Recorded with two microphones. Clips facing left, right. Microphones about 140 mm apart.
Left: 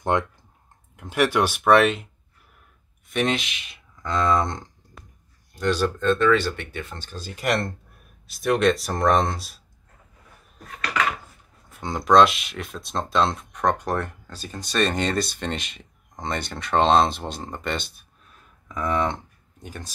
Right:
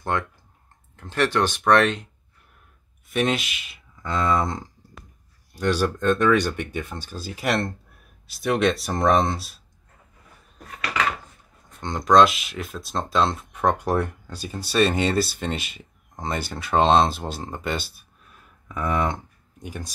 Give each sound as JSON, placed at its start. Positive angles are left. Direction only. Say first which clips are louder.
{"t": 0.1, "sound": "speech", "louder": "left 3 dB", "side_deg": 20}
{"t": 3.1, "sound": "speech", "louder": "right 1 dB", "side_deg": 0}
{"t": 11.7, "sound": "speech", "louder": "even", "side_deg": 5}